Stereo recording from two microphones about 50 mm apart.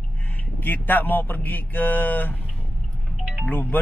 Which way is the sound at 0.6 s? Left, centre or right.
Left.